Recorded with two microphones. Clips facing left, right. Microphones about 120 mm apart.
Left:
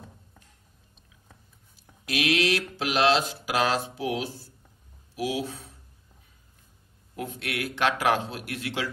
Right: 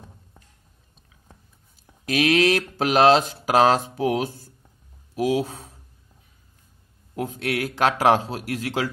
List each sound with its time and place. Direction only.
2.0 s speech: 45° right (ahead or behind)
7.2 s a man's voice: 35° right (ahead or behind)